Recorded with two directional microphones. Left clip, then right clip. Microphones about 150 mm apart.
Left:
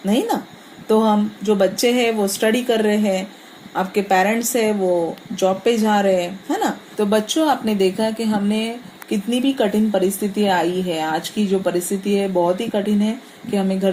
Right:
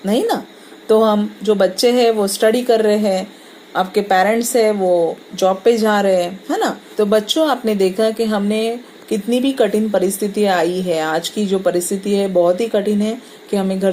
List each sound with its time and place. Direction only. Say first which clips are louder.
0.0 s a woman's voice: right 3 dB; 40° right (ahead or behind)